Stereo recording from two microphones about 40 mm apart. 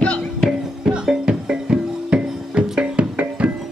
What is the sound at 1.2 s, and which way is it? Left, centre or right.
Music, right.